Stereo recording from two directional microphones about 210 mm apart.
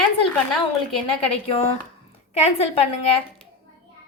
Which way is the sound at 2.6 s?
30° left (ahead or behind).